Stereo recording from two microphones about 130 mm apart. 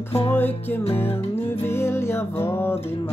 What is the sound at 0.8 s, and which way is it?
Music, 50° left (ahead or behind).